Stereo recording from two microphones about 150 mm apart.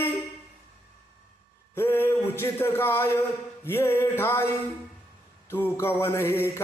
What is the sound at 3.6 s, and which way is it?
Speech, 15° left (ahead or behind).